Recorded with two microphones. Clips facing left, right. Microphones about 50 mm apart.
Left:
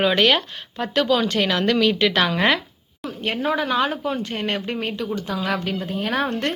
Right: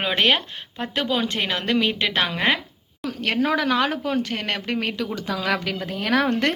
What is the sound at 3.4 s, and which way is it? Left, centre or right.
Speech, right.